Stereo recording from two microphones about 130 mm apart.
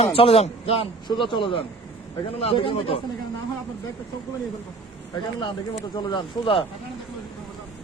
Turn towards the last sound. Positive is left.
turn(degrees=40)  # may be behind; listen again after turning